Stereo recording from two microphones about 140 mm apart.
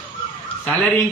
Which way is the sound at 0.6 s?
5° left (ahead or behind).